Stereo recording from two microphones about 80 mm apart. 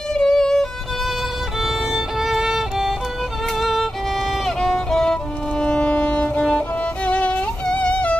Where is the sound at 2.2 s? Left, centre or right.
Centre.